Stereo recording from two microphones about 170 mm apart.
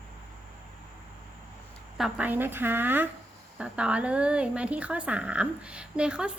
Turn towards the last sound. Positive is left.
turn(degrees=-5)  # may be behind; listen again after turning